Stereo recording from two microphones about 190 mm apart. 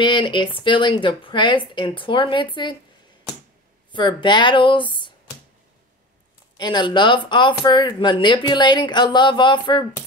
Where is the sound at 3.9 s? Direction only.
25° left (ahead or behind).